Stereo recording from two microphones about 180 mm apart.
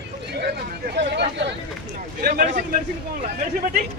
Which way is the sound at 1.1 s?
70° right (ahead or behind).